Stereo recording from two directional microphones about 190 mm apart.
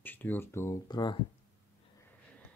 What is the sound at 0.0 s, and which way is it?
Speech, 10° left (ahead or behind).